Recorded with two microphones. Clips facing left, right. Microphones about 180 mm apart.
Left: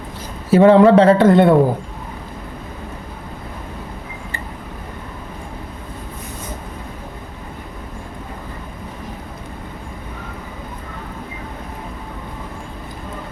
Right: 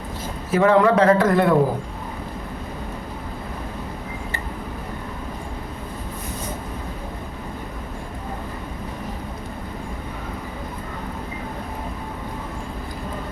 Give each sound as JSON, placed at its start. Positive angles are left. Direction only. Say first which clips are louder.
{"t": 0.5, "sound": "a man's voice", "louder": "left 7 dB", "side_deg": 30}